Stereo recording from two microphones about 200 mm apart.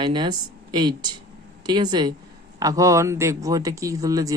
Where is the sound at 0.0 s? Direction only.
25° right (ahead or behind).